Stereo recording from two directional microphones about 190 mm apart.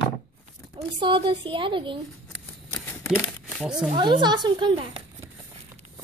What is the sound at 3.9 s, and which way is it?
A woman's voice, 25° right (ahead or behind).